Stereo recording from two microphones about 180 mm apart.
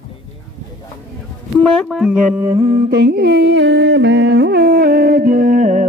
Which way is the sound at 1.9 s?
5° right (ahead or behind).